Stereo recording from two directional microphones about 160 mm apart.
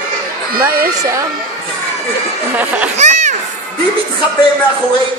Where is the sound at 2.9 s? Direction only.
50° right (ahead or behind).